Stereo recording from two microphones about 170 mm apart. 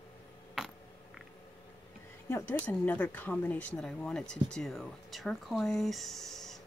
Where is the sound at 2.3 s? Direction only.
10° left (ahead or behind).